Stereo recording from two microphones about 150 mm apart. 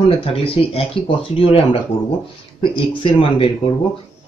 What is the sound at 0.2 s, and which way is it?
Speech, 40° left (ahead or behind).